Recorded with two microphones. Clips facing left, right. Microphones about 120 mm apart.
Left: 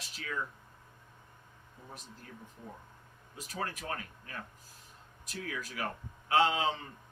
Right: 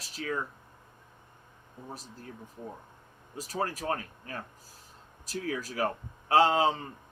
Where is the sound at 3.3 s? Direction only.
35° right (ahead or behind).